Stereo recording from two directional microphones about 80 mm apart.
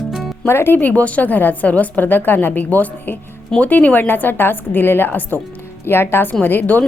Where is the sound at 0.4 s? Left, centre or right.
Left.